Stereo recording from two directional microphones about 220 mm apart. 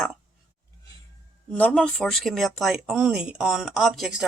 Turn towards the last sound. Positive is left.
turn(degrees=0)  # may be behind; listen again after turning